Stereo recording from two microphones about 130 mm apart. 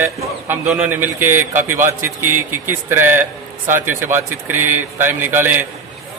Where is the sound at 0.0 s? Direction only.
15° right (ahead or behind).